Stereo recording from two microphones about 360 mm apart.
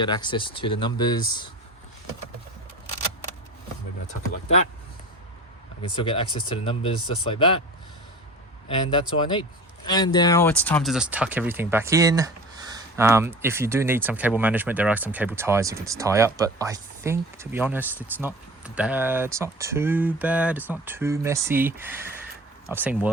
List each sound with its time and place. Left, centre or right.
0.0 s speech: centre
4.0 s speech: centre
6.0 s speech: centre
8.6 s speech: centre